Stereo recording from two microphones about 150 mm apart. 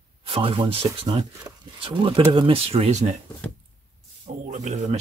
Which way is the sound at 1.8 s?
35° right (ahead or behind).